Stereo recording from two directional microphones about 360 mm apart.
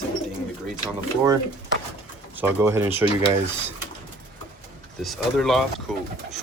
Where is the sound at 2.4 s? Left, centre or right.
Centre.